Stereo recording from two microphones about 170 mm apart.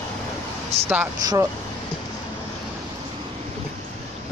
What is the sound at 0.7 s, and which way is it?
Speech, 40° right (ahead or behind).